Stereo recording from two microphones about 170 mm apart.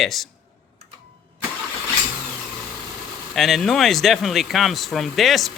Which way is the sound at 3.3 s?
Centre (ahead or behind).